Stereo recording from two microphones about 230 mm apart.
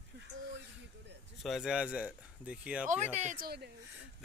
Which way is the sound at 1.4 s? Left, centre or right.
Centre.